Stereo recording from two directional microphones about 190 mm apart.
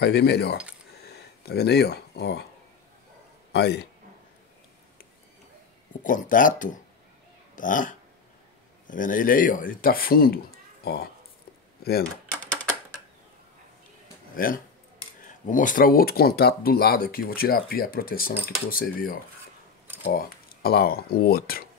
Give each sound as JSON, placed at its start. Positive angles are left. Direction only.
{"t": 0.0, "sound": "speech", "side_deg": 60}
{"t": 0.9, "sound": "a sound", "side_deg": 60}
{"t": 3.5, "sound": "speech", "side_deg": 60}
{"t": 6.0, "sound": "speech", "side_deg": 45}
{"t": 14.3, "sound": "speech", "side_deg": 50}